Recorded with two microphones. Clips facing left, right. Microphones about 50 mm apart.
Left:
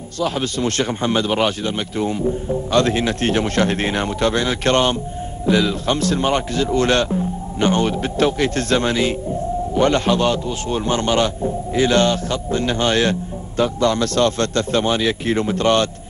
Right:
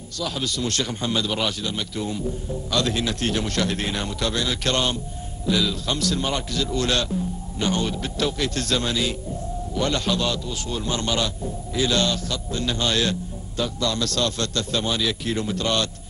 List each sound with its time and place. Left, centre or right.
0.2 s a man's voice: left